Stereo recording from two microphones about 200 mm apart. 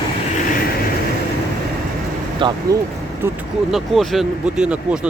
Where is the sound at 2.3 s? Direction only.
25° right (ahead or behind).